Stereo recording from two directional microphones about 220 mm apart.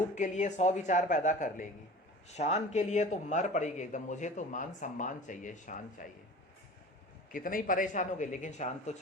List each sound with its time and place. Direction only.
0.2 s a man's voice: 35° left (ahead or behind)
7.3 s a man's voice: 40° left (ahead or behind)